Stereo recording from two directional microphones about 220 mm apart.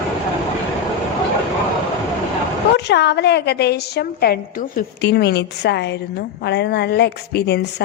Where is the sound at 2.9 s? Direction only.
50° left (ahead or behind).